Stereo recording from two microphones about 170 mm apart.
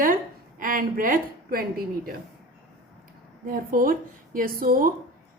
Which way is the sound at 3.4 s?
55° right (ahead or behind).